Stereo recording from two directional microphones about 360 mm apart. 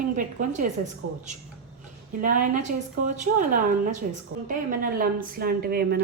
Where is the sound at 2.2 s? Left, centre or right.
Right.